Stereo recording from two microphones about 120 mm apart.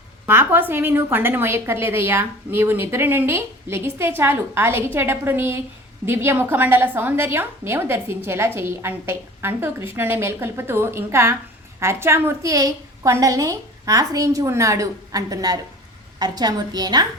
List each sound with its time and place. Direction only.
0.3 s a woman's voice: 20° right (ahead or behind); by 17.1 s 35° right (ahead or behind)